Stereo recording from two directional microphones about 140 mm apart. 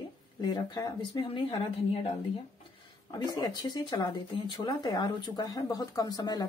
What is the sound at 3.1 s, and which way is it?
Speech, 25° left (ahead or behind).